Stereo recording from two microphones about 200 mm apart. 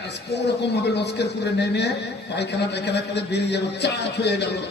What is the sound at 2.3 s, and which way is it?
A man's voice, 60° left (ahead or behind).